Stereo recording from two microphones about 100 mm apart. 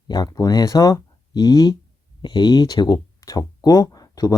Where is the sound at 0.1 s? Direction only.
40° left (ahead or behind).